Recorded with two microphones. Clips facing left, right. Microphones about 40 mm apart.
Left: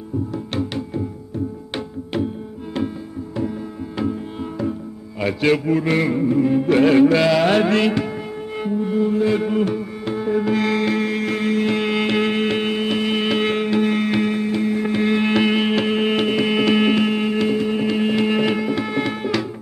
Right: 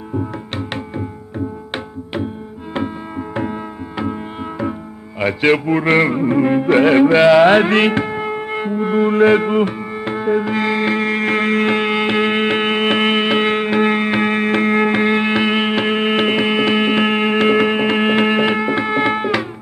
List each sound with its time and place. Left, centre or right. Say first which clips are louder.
0.6 s music: left 1 dB; right
3.9 s music: right 1 dB; right
5.2 s a man's voice: right 3 dB; right
6.7 s music: right 2 dB; right
8.5 s music: even; right
8.8 s music: right 7 dB; right
9.4 s music: right 3 dB; right
13.2 s music: right 4 dB; right
14.3 s music: right 5 dB; right
15.0 s music: right 2 dB; right
17.0 s music: right 4 dB; right
18.4 s music: right 4 dB; right